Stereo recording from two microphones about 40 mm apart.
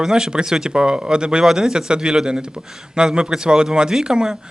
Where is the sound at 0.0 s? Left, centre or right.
Centre.